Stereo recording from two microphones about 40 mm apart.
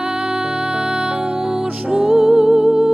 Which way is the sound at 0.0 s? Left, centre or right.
Centre.